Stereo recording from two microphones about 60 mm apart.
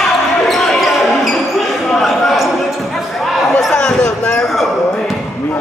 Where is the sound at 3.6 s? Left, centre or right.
Centre.